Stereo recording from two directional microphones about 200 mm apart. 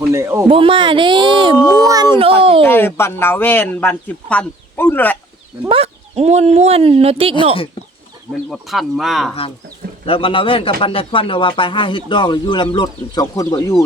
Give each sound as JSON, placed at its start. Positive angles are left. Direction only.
{"t": 0.0, "sound": "speech", "side_deg": -15}
{"t": 0.5, "sound": "speech", "side_deg": -25}
{"t": 1.7, "sound": "a sound", "side_deg": -20}
{"t": 2.1, "sound": "speech", "side_deg": -30}
{"t": 2.6, "sound": "speech", "side_deg": 10}
{"t": 5.6, "sound": "speech", "side_deg": -30}
{"t": 8.3, "sound": "speech", "side_deg": 0}
{"t": 10.1, "sound": "speech", "side_deg": 25}